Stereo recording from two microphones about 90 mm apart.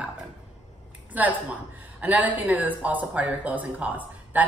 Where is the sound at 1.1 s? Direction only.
20° right (ahead or behind).